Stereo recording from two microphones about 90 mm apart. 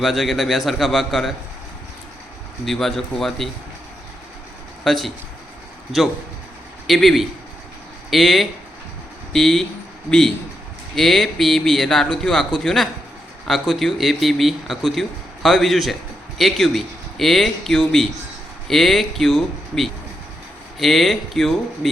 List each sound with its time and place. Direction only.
0.0 s a man's voice: centre (ahead or behind)
2.6 s a man's voice: 5° left (ahead or behind)
4.8 s speech: centre (ahead or behind)
6.8 s a man's voice: centre (ahead or behind)